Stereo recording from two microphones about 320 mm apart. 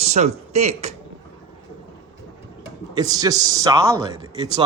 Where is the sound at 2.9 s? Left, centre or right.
Centre.